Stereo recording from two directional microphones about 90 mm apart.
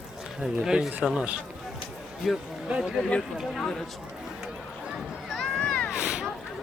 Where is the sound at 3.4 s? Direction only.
Centre (ahead or behind).